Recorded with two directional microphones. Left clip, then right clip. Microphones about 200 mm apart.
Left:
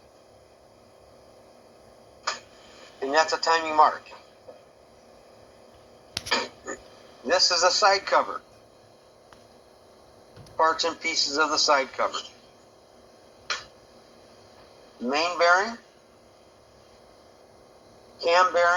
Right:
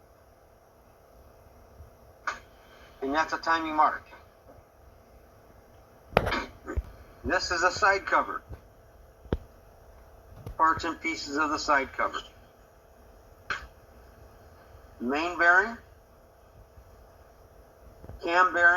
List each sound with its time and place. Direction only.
3.0 s a man's voice: 40° left (ahead or behind)
6.3 s a sound: 40° left (ahead or behind)
7.3 s a man's voice: 40° left (ahead or behind)
10.6 s a man's voice: 35° left (ahead or behind)
15.0 s a man's voice: 35° left (ahead or behind)
18.2 s a man's voice: 35° left (ahead or behind)